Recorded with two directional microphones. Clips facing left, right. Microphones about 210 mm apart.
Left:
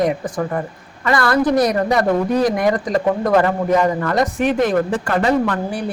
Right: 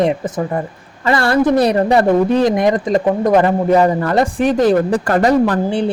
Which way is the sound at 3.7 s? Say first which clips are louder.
Right 4 dB; 30° right (ahead or behind).